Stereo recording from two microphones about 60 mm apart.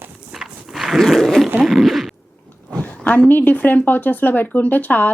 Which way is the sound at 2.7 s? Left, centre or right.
Left.